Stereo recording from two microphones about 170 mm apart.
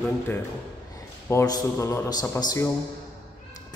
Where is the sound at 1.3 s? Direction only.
20° left (ahead or behind).